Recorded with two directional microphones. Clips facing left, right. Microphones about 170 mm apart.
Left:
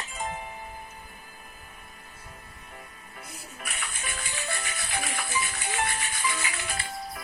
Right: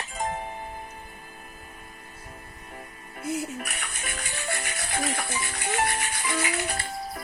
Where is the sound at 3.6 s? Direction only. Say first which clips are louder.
Right 3 dB; 45° right (ahead or behind).